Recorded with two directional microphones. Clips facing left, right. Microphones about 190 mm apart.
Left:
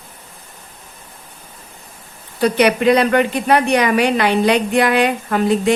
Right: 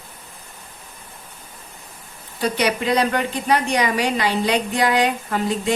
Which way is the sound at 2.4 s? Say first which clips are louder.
Left 7 dB; 65° left (ahead or behind).